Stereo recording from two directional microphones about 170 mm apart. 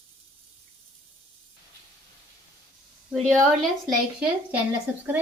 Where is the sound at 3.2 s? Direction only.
5° left (ahead or behind).